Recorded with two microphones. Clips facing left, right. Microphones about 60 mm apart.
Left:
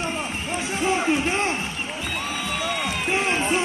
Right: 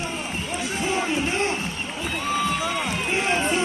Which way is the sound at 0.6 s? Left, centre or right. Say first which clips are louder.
Left 3 dB; left.